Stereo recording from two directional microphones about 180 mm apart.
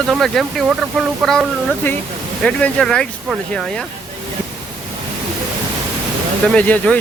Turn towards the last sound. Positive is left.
turn(degrees=5)  # may be behind; listen again after turning